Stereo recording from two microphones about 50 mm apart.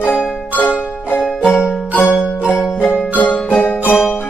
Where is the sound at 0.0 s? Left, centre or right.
Left.